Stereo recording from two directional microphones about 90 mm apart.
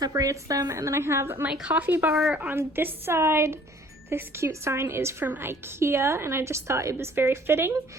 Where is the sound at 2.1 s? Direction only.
Centre (ahead or behind).